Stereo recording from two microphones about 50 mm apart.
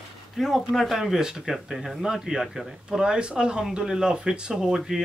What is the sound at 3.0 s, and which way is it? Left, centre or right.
Speech, centre.